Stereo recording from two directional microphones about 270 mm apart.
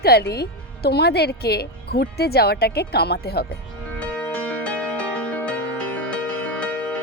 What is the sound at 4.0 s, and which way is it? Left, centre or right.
Music, centre.